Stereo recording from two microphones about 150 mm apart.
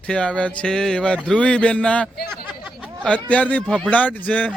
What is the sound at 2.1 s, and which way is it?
Speech, 90° left.